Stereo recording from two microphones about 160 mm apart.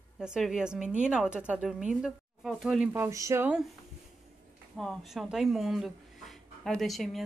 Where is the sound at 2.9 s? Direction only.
20° right (ahead or behind).